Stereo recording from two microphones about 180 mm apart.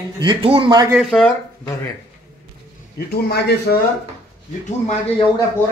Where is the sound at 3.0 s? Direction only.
60° left (ahead or behind).